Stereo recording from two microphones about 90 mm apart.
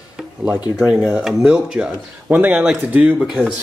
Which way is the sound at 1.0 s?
Centre (ahead or behind).